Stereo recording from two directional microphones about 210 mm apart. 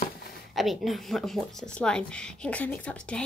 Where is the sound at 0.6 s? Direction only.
Centre (ahead or behind).